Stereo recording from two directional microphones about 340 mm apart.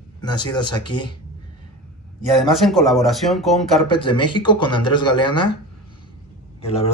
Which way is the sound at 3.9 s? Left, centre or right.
Centre.